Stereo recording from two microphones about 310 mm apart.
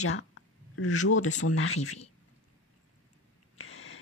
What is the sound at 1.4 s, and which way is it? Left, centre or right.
Speech, left.